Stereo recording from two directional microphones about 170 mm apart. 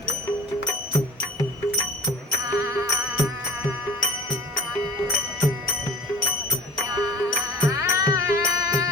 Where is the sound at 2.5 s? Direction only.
20° right (ahead or behind).